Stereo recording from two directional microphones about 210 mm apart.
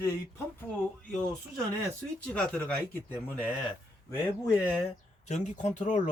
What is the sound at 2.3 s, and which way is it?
Speech, 5° left (ahead or behind).